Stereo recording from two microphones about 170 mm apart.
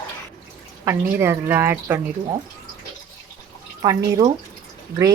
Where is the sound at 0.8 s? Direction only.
15° right (ahead or behind).